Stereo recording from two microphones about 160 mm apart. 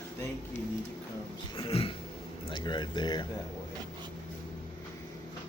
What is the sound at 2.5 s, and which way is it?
Speech, 30° left (ahead or behind).